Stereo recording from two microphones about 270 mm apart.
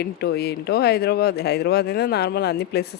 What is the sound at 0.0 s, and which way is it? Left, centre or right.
A woman's voice, left.